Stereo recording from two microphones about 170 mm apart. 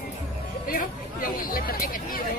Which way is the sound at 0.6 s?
55° left (ahead or behind).